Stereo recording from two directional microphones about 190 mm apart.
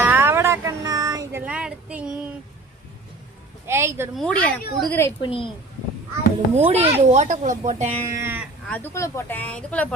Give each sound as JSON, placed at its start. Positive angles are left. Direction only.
{"t": 0.0, "sound": "music", "side_deg": -10}
{"t": 3.7, "sound": "speech", "side_deg": -15}
{"t": 4.1, "sound": "speech", "side_deg": 5}
{"t": 5.2, "sound": "speech", "side_deg": 25}
{"t": 6.6, "sound": "speech", "side_deg": -30}
{"t": 8.0, "sound": "speech", "side_deg": -15}
{"t": 8.7, "sound": "speech", "side_deg": 15}